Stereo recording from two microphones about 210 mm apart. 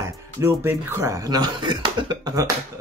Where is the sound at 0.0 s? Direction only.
15° right (ahead or behind).